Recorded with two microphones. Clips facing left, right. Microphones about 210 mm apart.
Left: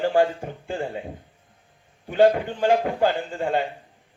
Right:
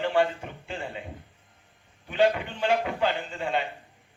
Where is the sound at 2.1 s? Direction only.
50° left (ahead or behind).